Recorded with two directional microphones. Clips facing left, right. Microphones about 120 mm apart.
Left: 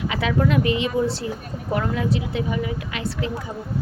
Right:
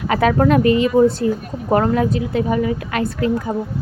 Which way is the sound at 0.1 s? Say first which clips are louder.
Right 8 dB; 50° right (ahead or behind).